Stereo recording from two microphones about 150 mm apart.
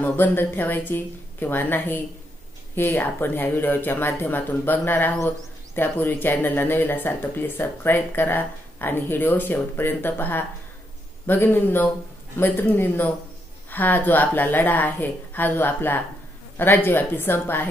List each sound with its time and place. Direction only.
0.0 s speech: 10° left (ahead or behind)